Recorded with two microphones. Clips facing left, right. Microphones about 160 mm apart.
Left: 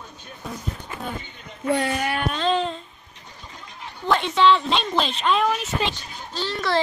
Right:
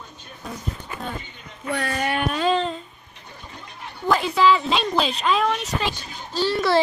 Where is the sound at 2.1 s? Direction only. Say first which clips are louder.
Right 3 dB; 5° right (ahead or behind).